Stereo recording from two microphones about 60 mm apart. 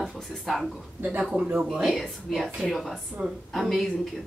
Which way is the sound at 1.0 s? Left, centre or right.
Right.